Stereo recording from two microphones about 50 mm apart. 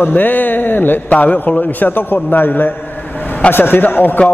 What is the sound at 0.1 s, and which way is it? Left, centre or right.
A man's voice, left.